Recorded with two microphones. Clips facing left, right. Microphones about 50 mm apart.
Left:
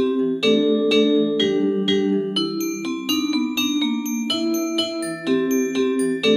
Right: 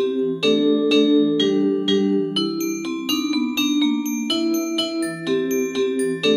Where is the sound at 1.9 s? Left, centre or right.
Left.